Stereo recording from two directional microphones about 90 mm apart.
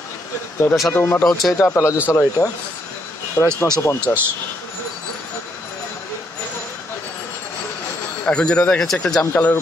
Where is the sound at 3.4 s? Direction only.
30° right (ahead or behind).